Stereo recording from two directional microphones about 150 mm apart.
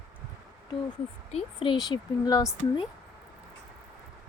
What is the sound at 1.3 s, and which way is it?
Speech, 35° left (ahead or behind).